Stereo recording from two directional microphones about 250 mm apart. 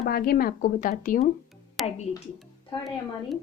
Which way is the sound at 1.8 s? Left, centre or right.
Centre.